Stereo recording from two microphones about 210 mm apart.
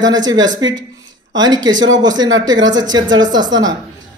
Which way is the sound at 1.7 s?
60° right (ahead or behind).